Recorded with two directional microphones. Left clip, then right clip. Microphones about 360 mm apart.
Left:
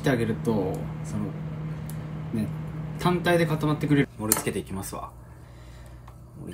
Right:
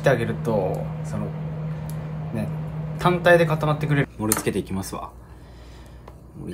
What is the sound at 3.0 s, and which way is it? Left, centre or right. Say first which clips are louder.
Speech: right 7 dB; centre.